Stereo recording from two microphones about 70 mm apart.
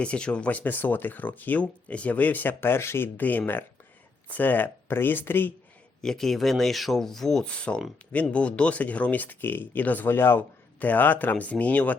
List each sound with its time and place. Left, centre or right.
0.0 s speech: centre; by 3.1 s left
3.2 s speech: left
6.0 s speech: centre